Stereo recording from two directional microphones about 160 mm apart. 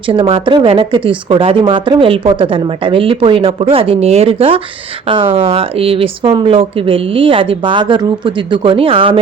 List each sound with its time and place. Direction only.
0.1 s speech: 35° right (ahead or behind)